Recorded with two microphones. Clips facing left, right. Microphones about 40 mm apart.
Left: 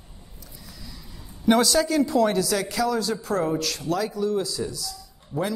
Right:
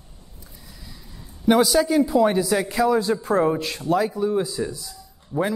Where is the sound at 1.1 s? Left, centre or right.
Centre.